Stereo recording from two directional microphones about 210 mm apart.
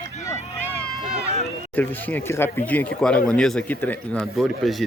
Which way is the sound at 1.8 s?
10° left (ahead or behind).